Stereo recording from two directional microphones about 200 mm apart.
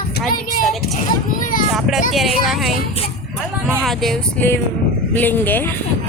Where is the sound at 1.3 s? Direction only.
45° left (ahead or behind).